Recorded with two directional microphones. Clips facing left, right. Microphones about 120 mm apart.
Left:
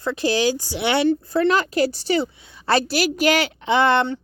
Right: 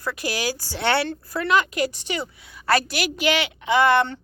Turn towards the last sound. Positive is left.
turn(degrees=25)  # may be behind; listen again after turning